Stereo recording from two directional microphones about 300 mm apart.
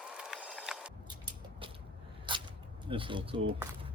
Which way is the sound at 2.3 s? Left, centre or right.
Centre.